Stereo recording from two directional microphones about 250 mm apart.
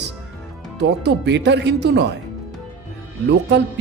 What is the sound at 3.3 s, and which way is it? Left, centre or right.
Speech, right.